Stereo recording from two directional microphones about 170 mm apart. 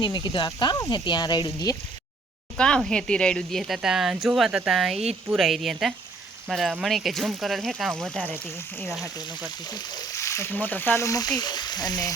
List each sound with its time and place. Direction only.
0.0 s speech: 25° left (ahead or behind)
2.6 s speech: 5° left (ahead or behind)
9.6 s speech: 20° left (ahead or behind)